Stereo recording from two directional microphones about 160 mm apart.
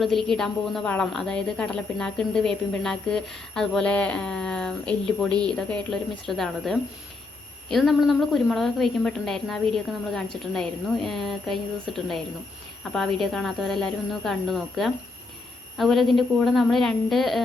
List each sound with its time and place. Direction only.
0.0 s a woman's voice: centre (ahead or behind)